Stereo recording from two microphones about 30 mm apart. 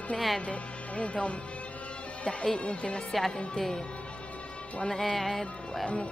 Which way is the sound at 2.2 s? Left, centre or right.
Left.